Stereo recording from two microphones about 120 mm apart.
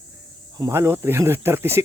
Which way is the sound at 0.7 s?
20° right (ahead or behind).